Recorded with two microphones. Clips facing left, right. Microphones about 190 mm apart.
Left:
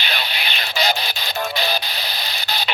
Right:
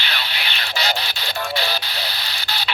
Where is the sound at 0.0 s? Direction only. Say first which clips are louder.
Left 2 dB; 15° left (ahead or behind).